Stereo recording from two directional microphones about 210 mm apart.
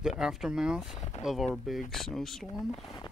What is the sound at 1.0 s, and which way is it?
Speech, 35° left (ahead or behind).